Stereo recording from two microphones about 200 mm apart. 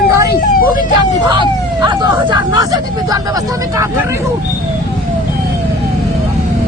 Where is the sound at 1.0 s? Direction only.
20° right (ahead or behind).